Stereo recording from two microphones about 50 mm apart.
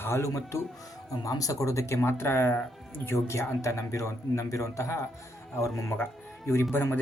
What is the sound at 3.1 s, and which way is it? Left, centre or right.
A man's voice, left.